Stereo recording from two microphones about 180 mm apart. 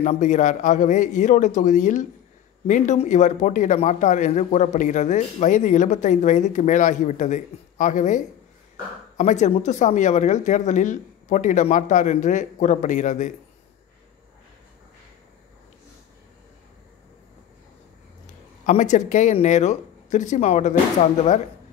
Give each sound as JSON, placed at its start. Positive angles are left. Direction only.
{"t": 0.0, "sound": "a man's voice", "side_deg": 40}
{"t": 18.2, "sound": "speech", "side_deg": 45}